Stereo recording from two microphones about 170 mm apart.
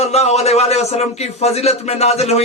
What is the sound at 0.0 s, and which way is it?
Speech, 40° left (ahead or behind).